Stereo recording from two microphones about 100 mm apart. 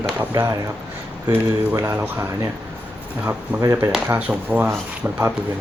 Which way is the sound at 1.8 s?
25° right (ahead or behind).